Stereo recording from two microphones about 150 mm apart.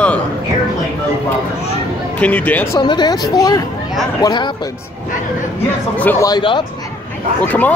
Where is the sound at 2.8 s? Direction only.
30° left (ahead or behind).